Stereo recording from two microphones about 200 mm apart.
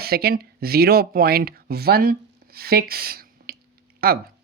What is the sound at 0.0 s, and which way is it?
Speech, 50° right (ahead or behind).